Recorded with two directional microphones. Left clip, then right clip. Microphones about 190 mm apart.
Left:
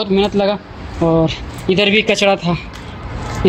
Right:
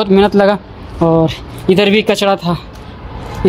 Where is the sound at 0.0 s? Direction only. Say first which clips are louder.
Right 5 dB; 35° right (ahead or behind).